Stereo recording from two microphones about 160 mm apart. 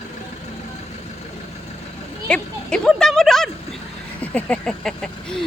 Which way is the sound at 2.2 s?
5° left (ahead or behind).